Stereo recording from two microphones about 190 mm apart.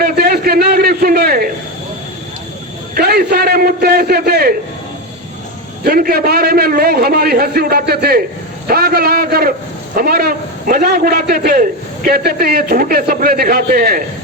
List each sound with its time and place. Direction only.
0.0 s a sound: 55° right (ahead or behind)
2.9 s a man's voice: 55° right (ahead or behind)
5.8 s a man's voice: 55° right (ahead or behind)